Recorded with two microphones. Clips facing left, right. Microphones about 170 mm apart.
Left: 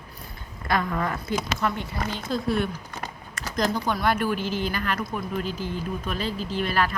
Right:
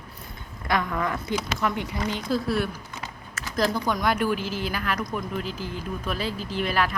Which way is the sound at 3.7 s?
15° left (ahead or behind).